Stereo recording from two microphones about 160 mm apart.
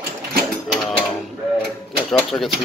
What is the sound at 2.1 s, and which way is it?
Speech, centre (ahead or behind).